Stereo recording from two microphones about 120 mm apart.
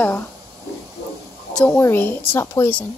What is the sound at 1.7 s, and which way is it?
Speech, 20° left (ahead or behind).